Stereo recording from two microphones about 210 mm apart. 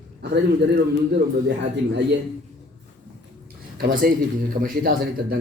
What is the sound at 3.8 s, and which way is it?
A man's voice, 45° right (ahead or behind).